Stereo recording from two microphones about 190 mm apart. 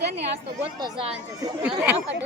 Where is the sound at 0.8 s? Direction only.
30° right (ahead or behind).